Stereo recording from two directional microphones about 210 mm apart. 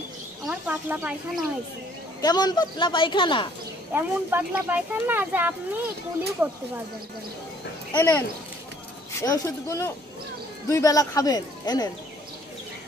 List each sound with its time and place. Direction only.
0.5 s speech: 5° right (ahead or behind)
2.2 s speech: 20° left (ahead or behind)
3.9 s speech: 10° right (ahead or behind)
7.9 s speech: 10° left (ahead or behind)
9.2 s speech: 15° left (ahead or behind)